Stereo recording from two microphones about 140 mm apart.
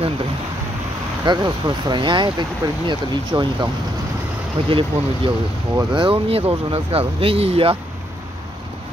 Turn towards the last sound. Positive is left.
turn(degrees=-45)  # may be behind; listen again after turning